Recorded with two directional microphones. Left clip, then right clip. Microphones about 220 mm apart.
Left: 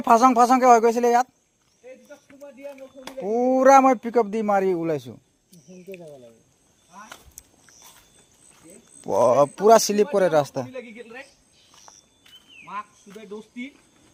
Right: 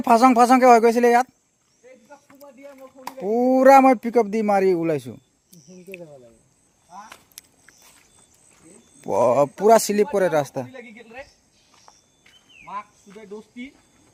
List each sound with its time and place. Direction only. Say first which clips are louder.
0.0 s speech: right 1 dB; 30° right (ahead or behind)
3.2 s speech: right 2 dB; 30° right (ahead or behind)
9.0 s speech: even; 25° right (ahead or behind)
11.7 s a sound: left 2 dB; 50° left (ahead or behind)